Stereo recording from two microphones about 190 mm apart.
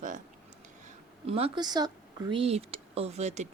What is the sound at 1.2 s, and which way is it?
Speech, 30° right (ahead or behind).